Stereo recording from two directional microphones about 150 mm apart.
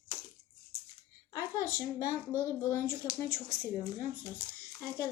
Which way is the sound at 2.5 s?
20° left (ahead or behind).